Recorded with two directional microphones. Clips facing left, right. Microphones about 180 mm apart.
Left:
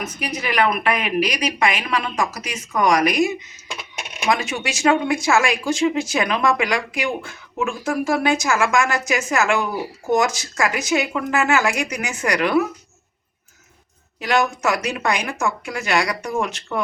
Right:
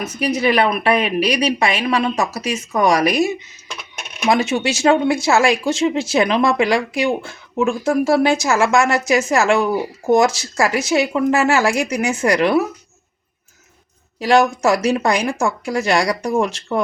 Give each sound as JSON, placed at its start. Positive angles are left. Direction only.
{"t": 0.2, "sound": "speech", "side_deg": -30}
{"t": 14.2, "sound": "a woman's voice", "side_deg": -30}